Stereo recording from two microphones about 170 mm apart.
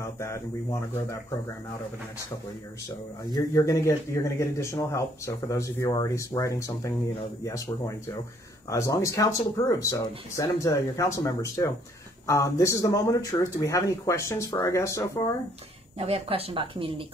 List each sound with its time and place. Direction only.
0.0 s speech: 15° left (ahead or behind)
3.3 s speech: 20° left (ahead or behind)
16.0 s speech: 35° right (ahead or behind)